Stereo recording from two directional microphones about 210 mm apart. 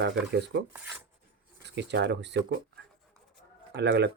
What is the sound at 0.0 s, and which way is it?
Speech, 55° right (ahead or behind).